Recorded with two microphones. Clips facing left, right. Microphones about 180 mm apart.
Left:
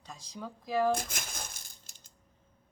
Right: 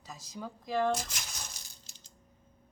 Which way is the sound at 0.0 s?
5° right (ahead or behind).